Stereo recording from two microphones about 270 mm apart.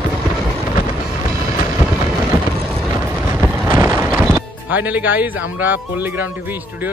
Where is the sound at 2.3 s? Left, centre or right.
Centre.